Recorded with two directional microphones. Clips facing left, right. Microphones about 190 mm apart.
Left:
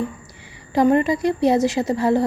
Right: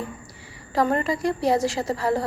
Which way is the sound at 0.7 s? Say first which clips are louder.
Left 6 dB; 20° left (ahead or behind).